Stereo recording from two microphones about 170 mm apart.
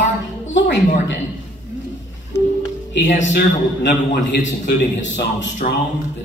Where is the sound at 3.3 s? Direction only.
90° left.